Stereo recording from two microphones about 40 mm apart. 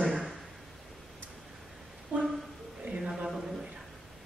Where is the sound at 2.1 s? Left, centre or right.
Right.